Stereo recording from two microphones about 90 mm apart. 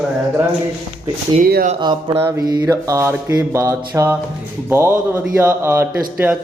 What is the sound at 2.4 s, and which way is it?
Mantra, 50° right (ahead or behind).